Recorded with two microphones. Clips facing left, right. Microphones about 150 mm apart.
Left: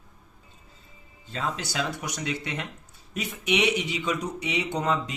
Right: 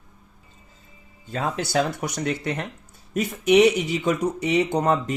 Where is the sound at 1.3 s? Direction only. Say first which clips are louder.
Right 6 dB; 50° right (ahead or behind).